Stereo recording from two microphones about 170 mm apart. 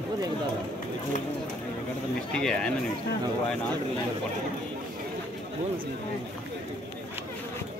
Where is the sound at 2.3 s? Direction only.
5° left (ahead or behind).